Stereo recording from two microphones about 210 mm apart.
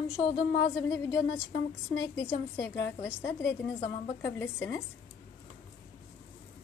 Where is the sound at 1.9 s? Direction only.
15° left (ahead or behind).